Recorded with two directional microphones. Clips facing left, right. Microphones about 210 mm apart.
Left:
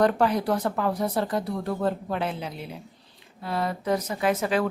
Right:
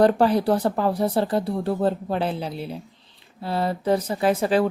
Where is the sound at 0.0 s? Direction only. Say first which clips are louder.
Right 4 dB; 30° right (ahead or behind).